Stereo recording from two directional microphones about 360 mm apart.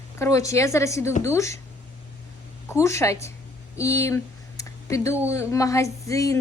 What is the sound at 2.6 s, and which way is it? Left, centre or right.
Speech, centre.